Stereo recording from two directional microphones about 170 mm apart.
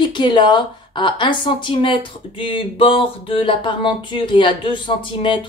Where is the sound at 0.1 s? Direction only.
25° left (ahead or behind).